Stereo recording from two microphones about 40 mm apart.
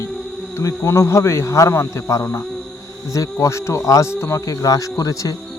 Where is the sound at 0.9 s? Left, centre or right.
Left.